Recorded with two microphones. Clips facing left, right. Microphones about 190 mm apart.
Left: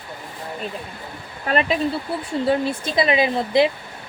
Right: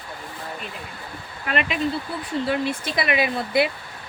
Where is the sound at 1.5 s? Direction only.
35° left (ahead or behind).